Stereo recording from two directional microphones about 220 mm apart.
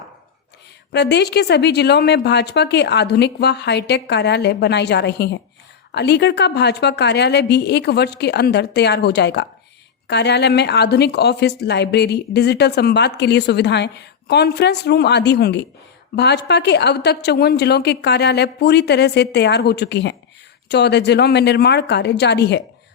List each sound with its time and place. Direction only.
0.9 s speech: 50° left (ahead or behind)